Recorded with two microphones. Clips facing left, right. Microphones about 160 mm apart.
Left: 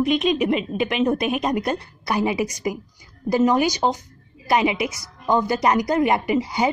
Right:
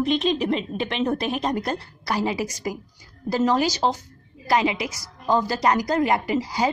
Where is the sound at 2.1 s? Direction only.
20° left (ahead or behind).